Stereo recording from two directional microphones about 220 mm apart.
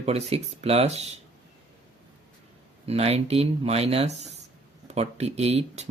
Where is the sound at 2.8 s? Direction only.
30° right (ahead or behind).